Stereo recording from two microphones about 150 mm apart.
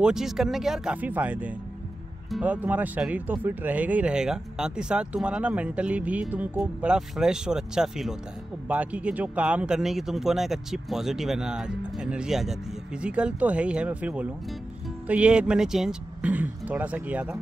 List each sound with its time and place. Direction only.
0.0 s speech: 5° right (ahead or behind)